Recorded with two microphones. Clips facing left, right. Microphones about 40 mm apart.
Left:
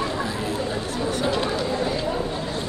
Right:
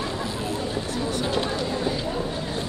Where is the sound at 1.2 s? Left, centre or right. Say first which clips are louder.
Left 4 dB; centre.